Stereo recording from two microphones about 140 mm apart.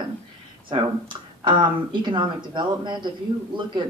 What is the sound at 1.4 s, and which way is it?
Speech, 35° right (ahead or behind).